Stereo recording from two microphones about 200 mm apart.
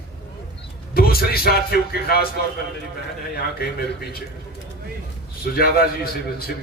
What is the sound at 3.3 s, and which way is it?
Speech, 50° left (ahead or behind).